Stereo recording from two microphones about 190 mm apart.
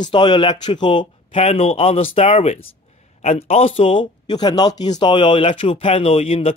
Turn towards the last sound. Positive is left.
turn(degrees=30)  # may be behind; listen again after turning